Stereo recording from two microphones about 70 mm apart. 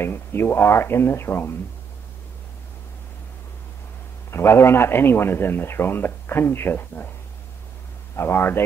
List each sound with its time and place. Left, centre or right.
0.0 s a man's voice: left
4.3 s a man's voice: left
8.2 s a man's voice: left